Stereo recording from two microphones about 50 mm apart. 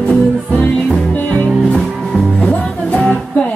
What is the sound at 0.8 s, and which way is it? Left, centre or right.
Music, centre.